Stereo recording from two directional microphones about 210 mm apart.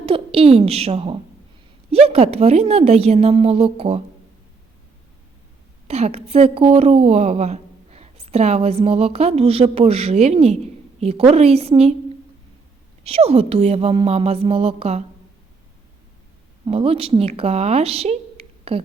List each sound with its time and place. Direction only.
0.0 s a woman's voice: 25° right (ahead or behind)
5.9 s a woman's voice: 30° right (ahead or behind)
13.1 s a woman's voice: 30° right (ahead or behind)
16.6 s speech: 25° right (ahead or behind)